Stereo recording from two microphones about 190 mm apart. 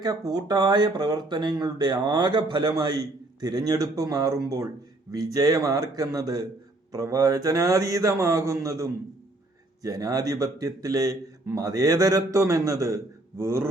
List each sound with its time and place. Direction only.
0.0 s a man's voice: 20° right (ahead or behind)